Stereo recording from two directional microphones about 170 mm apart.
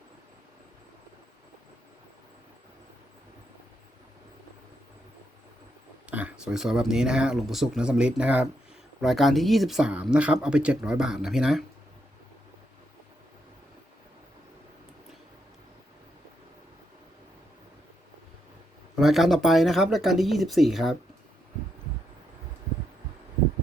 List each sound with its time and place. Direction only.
6.1 s speech: 10° right (ahead or behind)
18.9 s speech: centre (ahead or behind)